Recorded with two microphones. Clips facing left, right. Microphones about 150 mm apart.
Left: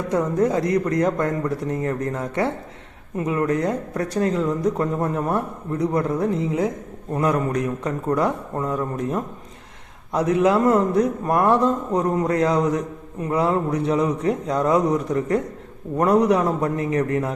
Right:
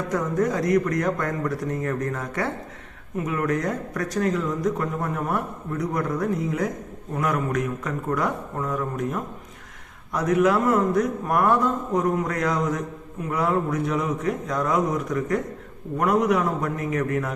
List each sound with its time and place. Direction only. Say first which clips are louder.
0.1 s a man's voice: left 4 dB; 25° left (ahead or behind)